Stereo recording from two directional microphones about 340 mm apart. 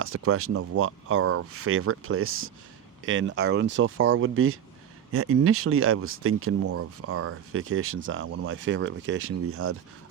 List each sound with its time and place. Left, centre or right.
0.0 s speech: right